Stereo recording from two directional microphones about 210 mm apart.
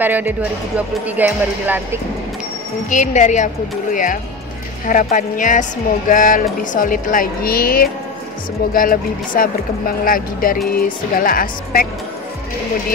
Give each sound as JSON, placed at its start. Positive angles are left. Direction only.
{"t": 0.0, "sound": "speech", "side_deg": -10}
{"t": 2.9, "sound": "speech", "side_deg": 35}
{"t": 10.7, "sound": "music", "side_deg": 40}